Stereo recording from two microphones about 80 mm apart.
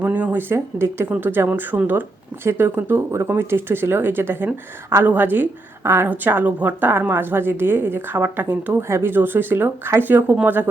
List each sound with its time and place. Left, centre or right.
0.0 s a woman's voice: right